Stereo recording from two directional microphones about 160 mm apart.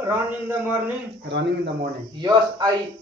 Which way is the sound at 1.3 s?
90° right.